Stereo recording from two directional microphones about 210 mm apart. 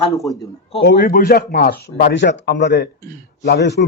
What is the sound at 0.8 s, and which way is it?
A man's voice, 55° left (ahead or behind).